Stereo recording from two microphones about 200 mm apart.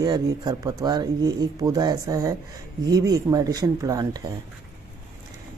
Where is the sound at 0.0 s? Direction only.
20° right (ahead or behind).